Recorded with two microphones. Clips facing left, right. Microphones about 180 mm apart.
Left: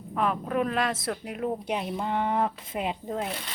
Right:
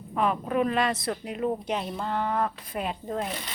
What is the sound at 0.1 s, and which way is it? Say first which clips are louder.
Speech: right 1 dB; centre (ahead or behind).